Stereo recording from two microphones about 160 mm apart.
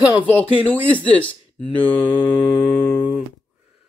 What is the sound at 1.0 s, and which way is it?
Speech, 10° left (ahead or behind).